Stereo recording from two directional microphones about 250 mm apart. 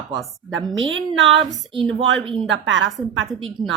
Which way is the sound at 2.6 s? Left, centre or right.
Right.